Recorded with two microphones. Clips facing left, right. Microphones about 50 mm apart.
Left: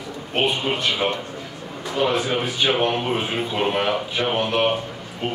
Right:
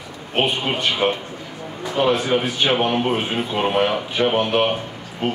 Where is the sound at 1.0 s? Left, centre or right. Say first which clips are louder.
Right 5 dB; centre.